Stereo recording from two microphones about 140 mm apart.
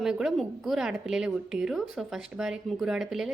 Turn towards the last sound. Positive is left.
turn(degrees=-5)  # may be behind; listen again after turning